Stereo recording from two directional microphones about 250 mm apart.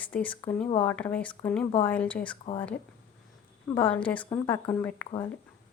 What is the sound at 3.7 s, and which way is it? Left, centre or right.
A woman's voice, centre.